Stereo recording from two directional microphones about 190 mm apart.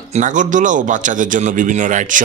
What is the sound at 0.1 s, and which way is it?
Speech, 40° right (ahead or behind).